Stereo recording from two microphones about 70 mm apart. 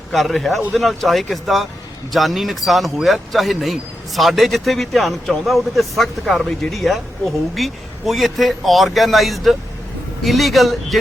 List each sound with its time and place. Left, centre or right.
0.1 s speech: centre